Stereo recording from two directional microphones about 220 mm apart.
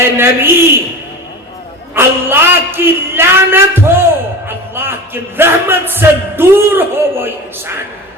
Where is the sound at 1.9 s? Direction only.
10° right (ahead or behind).